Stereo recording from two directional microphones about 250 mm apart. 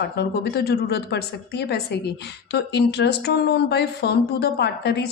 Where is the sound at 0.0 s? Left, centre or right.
Left.